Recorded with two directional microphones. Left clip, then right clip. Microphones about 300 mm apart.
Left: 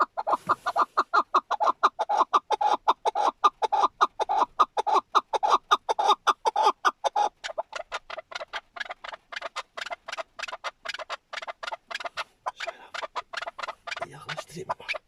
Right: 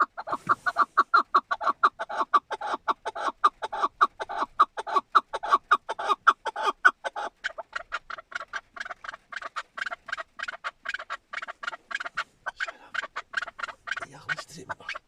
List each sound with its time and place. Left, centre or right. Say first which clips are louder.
0.0 s chicken: left 2 dB; centre
9.0 s a sound: left 1 dB; centre
14.7 s beatboxing: left 4 dB; centre